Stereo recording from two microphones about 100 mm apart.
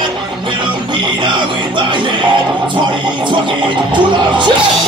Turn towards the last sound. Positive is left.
turn(degrees=-55)  # may be behind; listen again after turning